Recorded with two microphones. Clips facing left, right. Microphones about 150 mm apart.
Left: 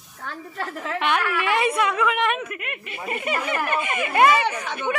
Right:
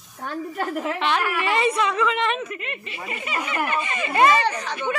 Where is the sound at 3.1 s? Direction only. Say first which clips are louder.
Left 4 dB; 50° left (ahead or behind).